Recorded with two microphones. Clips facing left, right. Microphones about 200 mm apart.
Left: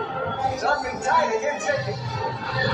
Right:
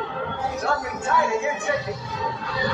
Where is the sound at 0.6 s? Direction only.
40° left (ahead or behind).